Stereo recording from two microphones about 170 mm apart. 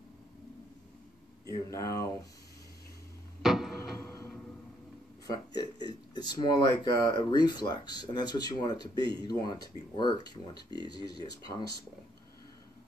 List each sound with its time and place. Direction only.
1.5 s speech: 20° left (ahead or behind)
3.4 s a sound: centre (ahead or behind)
4.0 s music: 15° left (ahead or behind)
5.5 s speech: 25° left (ahead or behind)